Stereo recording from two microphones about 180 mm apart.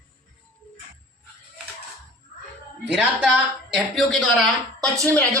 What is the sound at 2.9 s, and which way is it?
Speech, 10° right (ahead or behind).